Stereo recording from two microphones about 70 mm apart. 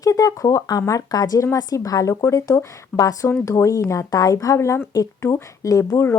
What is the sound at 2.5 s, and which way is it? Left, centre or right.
Speech, left.